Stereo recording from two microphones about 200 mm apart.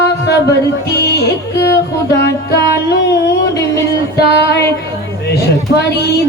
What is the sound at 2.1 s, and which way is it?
Music, 60° left (ahead or behind).